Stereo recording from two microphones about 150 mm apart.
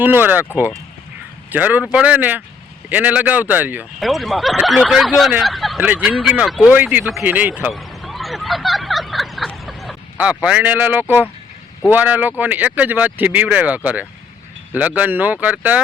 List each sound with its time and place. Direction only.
0.0 s speech: 15° right (ahead or behind)
1.5 s speech: 10° right (ahead or behind)
4.0 s speech: centre (ahead or behind)
5.8 s speech: 10° right (ahead or behind)
7.1 s a sound: 5° right (ahead or behind)
11.9 s speech: 10° right (ahead or behind)